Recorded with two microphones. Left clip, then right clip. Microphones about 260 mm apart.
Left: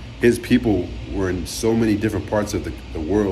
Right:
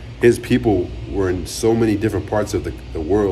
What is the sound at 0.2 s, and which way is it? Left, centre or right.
Speech, centre.